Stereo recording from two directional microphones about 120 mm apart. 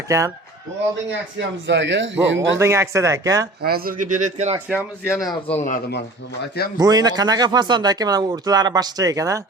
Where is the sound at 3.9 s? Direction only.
90° right.